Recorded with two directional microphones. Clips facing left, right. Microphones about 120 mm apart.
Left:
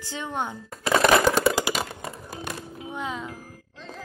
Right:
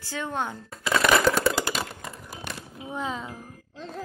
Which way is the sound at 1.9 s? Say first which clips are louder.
Left 3 dB; 25° left (ahead or behind).